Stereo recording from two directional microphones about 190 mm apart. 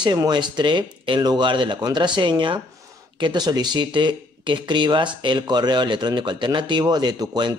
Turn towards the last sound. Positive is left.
turn(degrees=-20)  # may be behind; listen again after turning